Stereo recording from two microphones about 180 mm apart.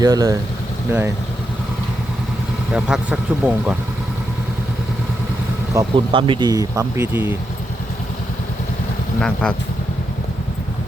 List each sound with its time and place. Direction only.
0.0 s speech: 20° right (ahead or behind)
2.7 s speech: 5° right (ahead or behind)
5.7 s speech: 15° right (ahead or behind)
6.1 s speech: 30° right (ahead or behind); by 7.3 s 10° right (ahead or behind)
9.2 s speech: 5° left (ahead or behind)